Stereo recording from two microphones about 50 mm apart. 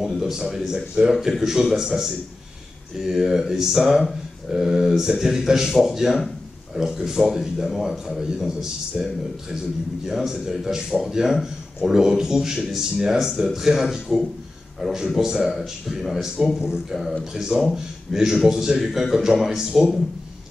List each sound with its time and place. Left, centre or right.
0.0 s a man's voice: centre